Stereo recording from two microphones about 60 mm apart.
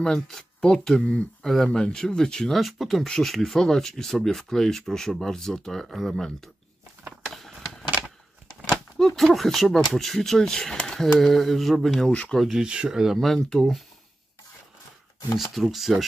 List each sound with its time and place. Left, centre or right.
0.0 s speech: centre
2.5 s speech: centre
7.2 s a sound: centre
8.9 s speech: centre
12.1 s speech: left
12.5 s speech: centre
13.2 s speech: centre
15.3 s speech: centre